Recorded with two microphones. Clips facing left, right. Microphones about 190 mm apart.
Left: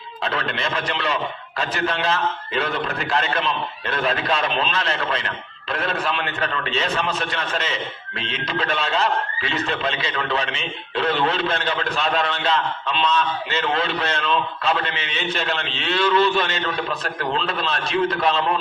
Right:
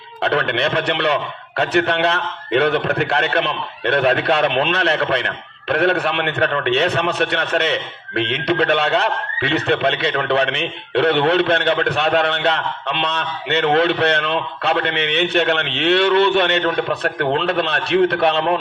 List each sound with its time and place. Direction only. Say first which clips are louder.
0.2 s a man's voice: right 7 dB; 65° right (ahead or behind)